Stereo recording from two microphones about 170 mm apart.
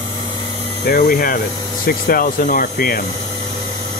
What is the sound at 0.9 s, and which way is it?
Speech, 60° left (ahead or behind).